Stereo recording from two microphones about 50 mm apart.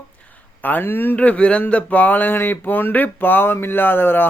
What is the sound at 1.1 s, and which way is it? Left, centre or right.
Speech, left.